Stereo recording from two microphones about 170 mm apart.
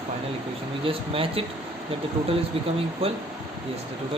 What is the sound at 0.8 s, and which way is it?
Speech, 35° right (ahead or behind).